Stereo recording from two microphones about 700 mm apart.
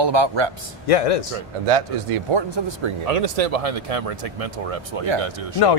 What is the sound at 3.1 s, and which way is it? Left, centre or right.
Speech, right.